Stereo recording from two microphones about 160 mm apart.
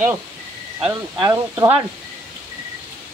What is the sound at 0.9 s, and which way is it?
Speech, 25° right (ahead or behind).